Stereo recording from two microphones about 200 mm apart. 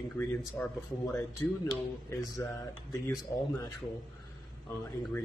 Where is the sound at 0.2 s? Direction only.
10° left (ahead or behind).